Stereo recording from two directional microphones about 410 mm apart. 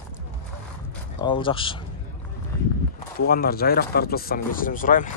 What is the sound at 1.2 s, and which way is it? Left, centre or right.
Speech, centre.